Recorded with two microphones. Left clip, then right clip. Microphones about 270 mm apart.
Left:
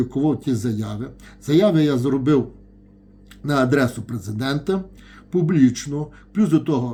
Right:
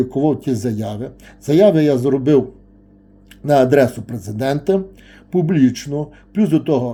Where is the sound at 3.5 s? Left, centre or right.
Left.